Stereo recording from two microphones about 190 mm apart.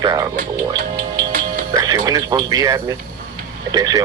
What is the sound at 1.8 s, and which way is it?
Speech, 20° right (ahead or behind).